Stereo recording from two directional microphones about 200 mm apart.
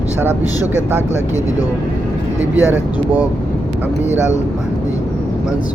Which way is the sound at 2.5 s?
10° right (ahead or behind).